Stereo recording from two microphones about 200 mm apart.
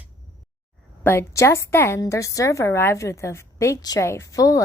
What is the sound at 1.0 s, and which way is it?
A woman's voice, 10° left (ahead or behind).